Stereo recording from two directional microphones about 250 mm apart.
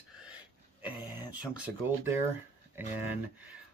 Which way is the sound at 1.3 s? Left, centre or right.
Centre.